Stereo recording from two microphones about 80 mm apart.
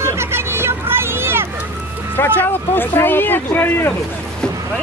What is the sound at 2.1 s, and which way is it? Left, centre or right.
Speech, left.